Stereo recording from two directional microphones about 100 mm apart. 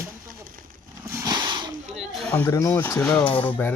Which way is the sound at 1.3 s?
45° right (ahead or behind).